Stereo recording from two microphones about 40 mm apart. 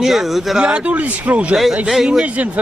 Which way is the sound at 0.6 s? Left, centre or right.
Right.